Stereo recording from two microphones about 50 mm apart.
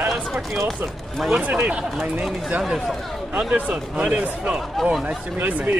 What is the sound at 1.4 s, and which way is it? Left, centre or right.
Speech, right.